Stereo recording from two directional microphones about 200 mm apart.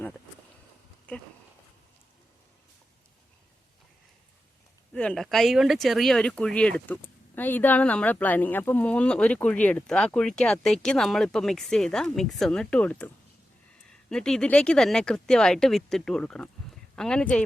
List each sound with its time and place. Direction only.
4.9 s speech: 5° left (ahead or behind)
14.1 s speech: 5° left (ahead or behind)